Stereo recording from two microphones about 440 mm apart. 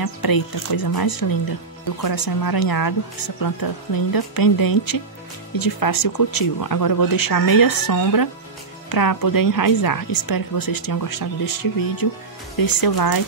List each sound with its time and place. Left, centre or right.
0.0 s a woman's voice: left